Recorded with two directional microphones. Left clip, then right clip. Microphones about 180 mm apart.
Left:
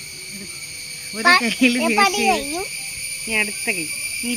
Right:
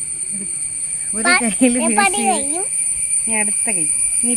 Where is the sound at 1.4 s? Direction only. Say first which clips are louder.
Right 1 dB; 75° right (ahead or behind).